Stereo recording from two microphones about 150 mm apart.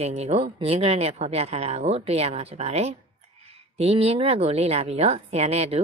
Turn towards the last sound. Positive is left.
turn(degrees=-45)  # may be behind; listen again after turning